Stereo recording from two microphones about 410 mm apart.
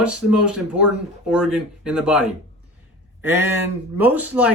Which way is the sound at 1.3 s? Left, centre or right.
Centre.